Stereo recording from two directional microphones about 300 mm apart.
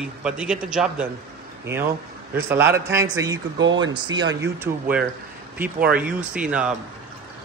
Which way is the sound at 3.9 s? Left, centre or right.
Centre.